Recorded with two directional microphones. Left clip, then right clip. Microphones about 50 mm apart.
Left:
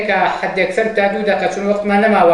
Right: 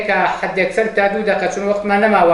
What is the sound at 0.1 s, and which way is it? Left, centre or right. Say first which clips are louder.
A man's voice: even; right.